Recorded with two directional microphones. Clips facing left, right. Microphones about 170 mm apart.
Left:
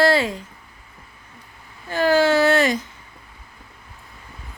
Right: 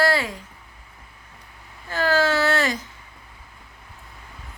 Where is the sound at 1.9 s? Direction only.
15° left (ahead or behind).